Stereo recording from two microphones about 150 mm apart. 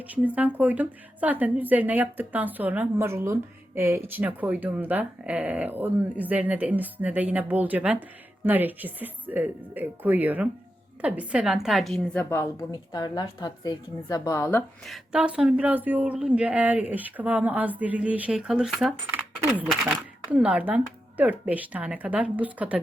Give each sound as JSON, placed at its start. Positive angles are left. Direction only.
{"t": 0.1, "sound": "a woman's voice", "side_deg": -10}
{"t": 12.7, "sound": "a woman's voice", "side_deg": 30}
{"t": 14.8, "sound": "speech", "side_deg": -5}